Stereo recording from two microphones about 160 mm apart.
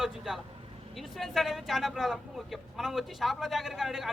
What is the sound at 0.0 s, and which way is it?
Speech, 5° right (ahead or behind).